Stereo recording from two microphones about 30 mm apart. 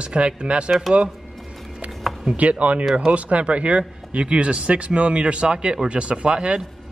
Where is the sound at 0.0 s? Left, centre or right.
Right.